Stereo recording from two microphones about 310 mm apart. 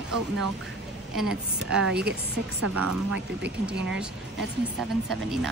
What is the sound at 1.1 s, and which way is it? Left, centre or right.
Speech, centre.